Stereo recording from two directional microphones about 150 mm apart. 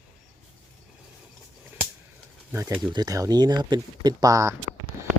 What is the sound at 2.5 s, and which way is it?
Speech, 15° right (ahead or behind).